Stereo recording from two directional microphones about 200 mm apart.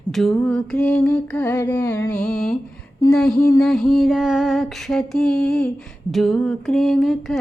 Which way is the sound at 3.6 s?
Centre (ahead or behind).